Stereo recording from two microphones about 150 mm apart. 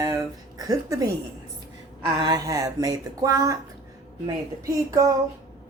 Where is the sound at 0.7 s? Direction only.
25° right (ahead or behind).